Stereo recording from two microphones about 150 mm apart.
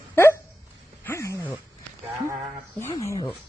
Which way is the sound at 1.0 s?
20° left (ahead or behind).